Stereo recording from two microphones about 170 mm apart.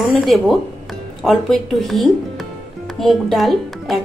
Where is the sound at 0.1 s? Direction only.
Centre (ahead or behind).